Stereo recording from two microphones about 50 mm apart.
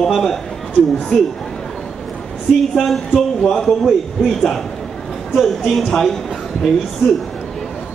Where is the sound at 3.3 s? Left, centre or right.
Centre.